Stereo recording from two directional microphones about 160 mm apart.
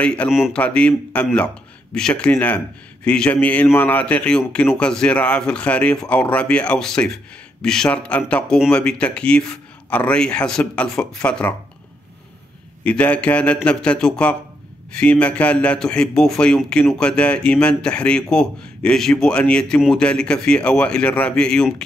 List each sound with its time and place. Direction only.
0.0 s a man's voice: 5° left (ahead or behind)
0.3 s a man's voice: 5° right (ahead or behind)
0.6 s a man's voice: 5° left (ahead or behind)
12.8 s a man's voice: 10° left (ahead or behind)